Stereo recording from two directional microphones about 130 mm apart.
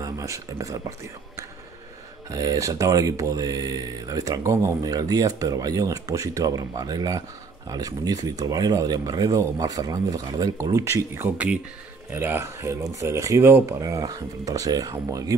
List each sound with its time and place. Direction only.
0.0 s speech: 25° right (ahead or behind)